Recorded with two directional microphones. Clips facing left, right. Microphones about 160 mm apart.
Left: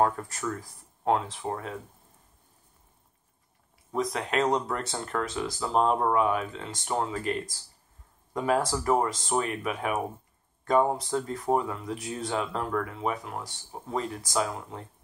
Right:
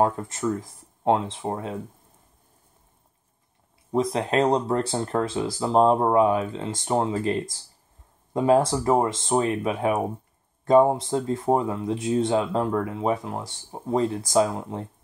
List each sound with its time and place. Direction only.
0.0 s speech: 25° right (ahead or behind)
3.9 s speech: 30° right (ahead or behind)